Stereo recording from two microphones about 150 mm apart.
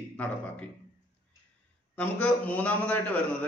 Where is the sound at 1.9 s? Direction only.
10° left (ahead or behind).